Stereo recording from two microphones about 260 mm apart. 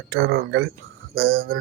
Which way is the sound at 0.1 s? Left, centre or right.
Right.